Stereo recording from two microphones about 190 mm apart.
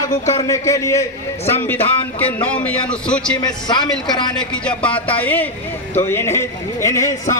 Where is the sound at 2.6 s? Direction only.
5° left (ahead or behind).